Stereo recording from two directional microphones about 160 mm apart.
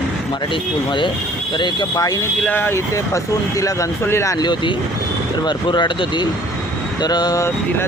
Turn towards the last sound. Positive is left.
turn(degrees=25)  # may be behind; listen again after turning